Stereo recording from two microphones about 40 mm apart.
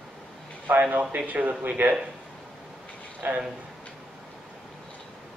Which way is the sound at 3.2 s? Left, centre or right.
Right.